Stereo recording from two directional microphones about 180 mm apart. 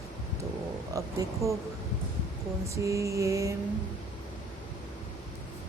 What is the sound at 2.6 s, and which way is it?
Speech, 15° right (ahead or behind).